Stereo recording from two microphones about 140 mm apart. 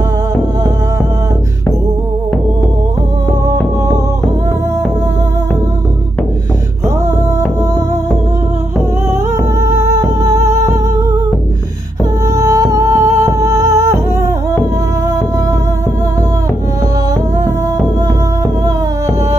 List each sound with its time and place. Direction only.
9.6 s music: 20° right (ahead or behind)
12.4 s music: 25° right (ahead or behind)